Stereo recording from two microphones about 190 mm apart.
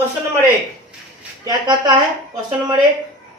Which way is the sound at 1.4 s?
20° right (ahead or behind).